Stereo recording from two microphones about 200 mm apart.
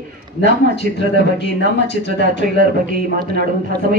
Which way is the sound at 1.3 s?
60° left (ahead or behind).